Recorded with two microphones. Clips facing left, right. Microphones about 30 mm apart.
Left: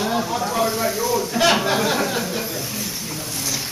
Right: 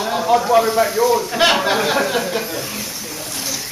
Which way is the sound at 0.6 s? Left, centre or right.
Right.